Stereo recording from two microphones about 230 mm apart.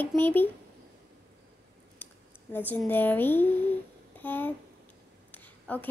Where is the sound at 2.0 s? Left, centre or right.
Centre.